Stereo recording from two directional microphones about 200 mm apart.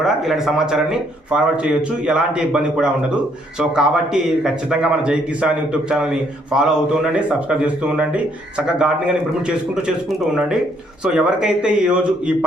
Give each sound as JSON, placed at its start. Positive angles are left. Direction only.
{"t": 0.0, "sound": "a man's voice", "side_deg": 0}